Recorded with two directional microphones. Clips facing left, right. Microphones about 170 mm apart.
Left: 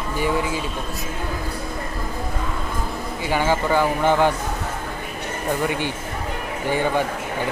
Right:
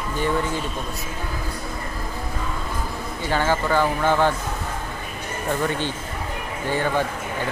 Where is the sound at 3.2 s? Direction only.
10° left (ahead or behind).